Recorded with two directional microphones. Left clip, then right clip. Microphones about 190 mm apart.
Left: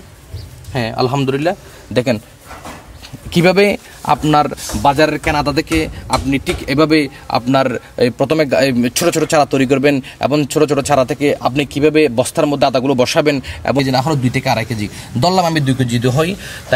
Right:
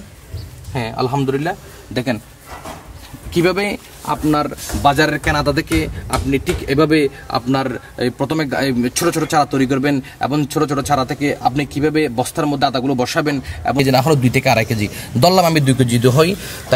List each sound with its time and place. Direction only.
0.7 s a man's voice: 55° left (ahead or behind)
3.3 s speech: 55° left (ahead or behind)
4.8 s a man's voice: 20° left (ahead or behind); by 13.7 s 50° left (ahead or behind)
13.8 s a man's voice: 25° right (ahead or behind)